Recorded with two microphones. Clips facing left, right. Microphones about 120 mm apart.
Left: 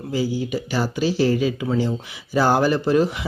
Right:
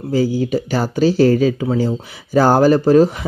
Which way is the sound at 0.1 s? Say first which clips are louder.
Right 7 dB; 45° right (ahead or behind).